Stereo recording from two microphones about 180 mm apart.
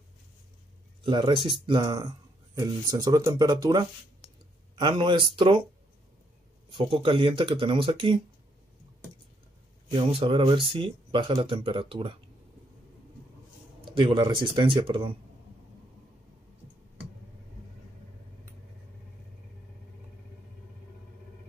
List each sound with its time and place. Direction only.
1.0 s speech: 25° right (ahead or behind)
6.7 s speech: 30° right (ahead or behind)
9.8 s speech: 30° right (ahead or behind)
13.7 s speech: 25° right (ahead or behind)